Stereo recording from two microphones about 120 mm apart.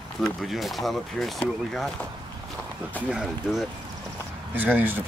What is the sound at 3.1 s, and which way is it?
Speech, 5° right (ahead or behind).